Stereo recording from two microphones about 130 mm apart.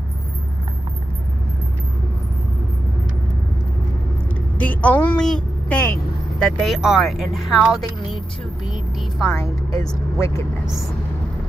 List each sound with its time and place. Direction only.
4.6 s a woman's voice: 10° left (ahead or behind)
6.4 s speech: centre (ahead or behind)
9.4 s speech: 30° left (ahead or behind)